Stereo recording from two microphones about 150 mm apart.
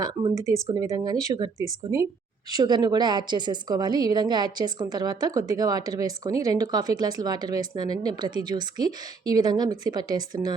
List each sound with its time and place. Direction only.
0.0 s speech: 30° right (ahead or behind)
0.3 s a woman's voice: 20° right (ahead or behind)